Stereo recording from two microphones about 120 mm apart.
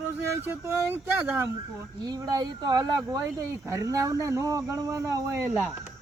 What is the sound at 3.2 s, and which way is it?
Speech, 25° right (ahead or behind).